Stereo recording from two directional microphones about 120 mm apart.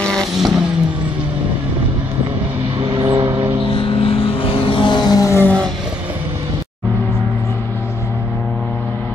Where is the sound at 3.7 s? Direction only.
50° left (ahead or behind); by 5.4 s 25° left (ahead or behind).